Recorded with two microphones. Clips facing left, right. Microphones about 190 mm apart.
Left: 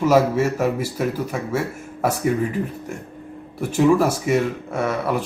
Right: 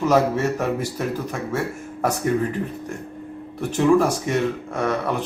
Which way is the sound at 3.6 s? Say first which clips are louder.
Left 1 dB; 5° left (ahead or behind).